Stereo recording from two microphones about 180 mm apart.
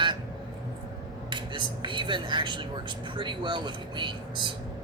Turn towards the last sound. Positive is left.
turn(degrees=-25)  # may be behind; listen again after turning